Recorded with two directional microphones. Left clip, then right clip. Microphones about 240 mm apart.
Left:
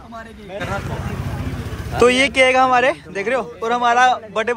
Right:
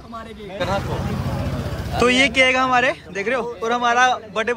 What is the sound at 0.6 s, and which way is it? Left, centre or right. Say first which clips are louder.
Speech: right 4 dB; right.